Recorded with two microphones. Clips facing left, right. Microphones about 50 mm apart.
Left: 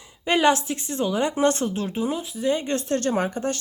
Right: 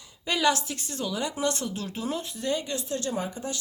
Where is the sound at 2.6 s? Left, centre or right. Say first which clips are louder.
Left 7 dB; left.